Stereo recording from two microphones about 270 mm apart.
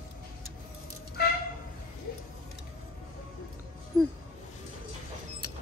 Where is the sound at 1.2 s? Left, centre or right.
Left.